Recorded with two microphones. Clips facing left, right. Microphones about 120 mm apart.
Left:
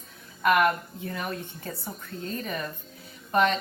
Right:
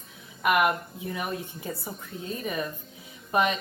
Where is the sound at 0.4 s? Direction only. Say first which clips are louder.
Left 1 dB; 10° right (ahead or behind).